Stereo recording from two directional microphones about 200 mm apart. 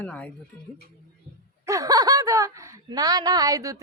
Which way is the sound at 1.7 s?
15° right (ahead or behind).